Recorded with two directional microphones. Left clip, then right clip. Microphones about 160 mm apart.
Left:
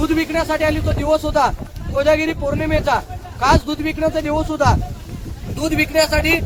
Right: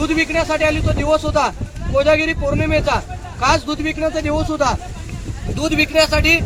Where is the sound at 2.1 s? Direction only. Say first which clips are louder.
Left 1 dB; 30° left (ahead or behind).